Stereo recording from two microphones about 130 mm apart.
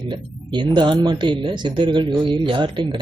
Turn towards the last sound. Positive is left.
turn(degrees=-40)  # may be behind; listen again after turning